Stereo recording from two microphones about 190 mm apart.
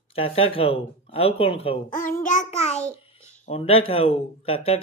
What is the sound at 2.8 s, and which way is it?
Babbling, 15° right (ahead or behind).